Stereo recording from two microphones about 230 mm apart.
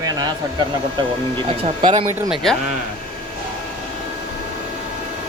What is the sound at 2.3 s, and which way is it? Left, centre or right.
Speech, centre.